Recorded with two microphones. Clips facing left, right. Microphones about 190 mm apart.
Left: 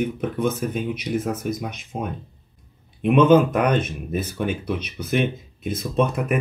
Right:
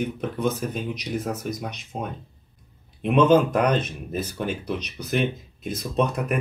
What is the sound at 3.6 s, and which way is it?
Speech, 55° left (ahead or behind).